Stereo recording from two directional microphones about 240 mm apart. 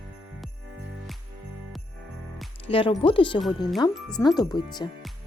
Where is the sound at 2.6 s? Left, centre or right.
Left.